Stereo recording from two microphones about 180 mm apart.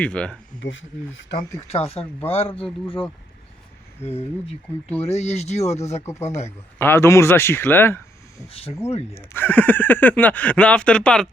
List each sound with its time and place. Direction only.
0.0 s speech: 5° left (ahead or behind)
0.6 s speech: 90° left
1.5 s speech: 35° left (ahead or behind)
5.0 s speech: 35° left (ahead or behind)
6.7 s speech: 15° left (ahead or behind)